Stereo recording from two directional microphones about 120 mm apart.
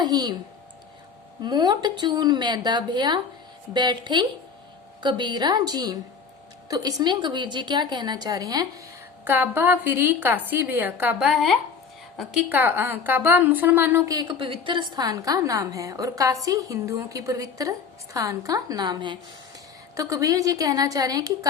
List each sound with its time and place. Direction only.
0.0 s a woman's voice: 35° right (ahead or behind)
1.4 s a woman's voice: 35° right (ahead or behind)
9.2 s a woman's voice: 15° right (ahead or behind)
11.2 s speech: 5° right (ahead or behind)
12.5 s a woman's voice: 15° right (ahead or behind)
14.1 s a woman's voice: 35° right (ahead or behind)